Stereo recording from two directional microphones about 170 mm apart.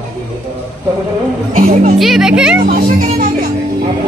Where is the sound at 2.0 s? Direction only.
5° right (ahead or behind).